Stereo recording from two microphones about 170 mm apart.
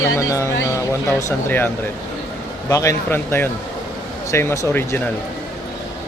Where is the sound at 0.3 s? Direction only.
15° left (ahead or behind).